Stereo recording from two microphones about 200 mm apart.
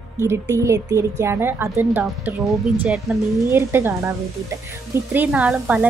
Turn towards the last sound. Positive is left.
turn(degrees=-5)  # may be behind; listen again after turning